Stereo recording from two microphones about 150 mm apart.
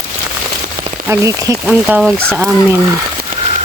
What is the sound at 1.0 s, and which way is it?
Speech, 20° right (ahead or behind).